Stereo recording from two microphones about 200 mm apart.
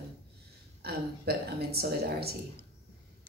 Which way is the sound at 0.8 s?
50° right (ahead or behind).